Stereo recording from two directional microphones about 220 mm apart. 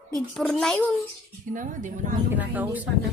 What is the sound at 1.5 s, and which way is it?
Speech, 35° right (ahead or behind).